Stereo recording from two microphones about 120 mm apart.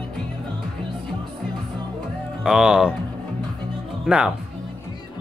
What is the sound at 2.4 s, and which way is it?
Speech, 5° right (ahead or behind).